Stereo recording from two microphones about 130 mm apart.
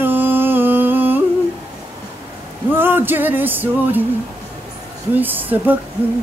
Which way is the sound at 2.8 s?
15° right (ahead or behind).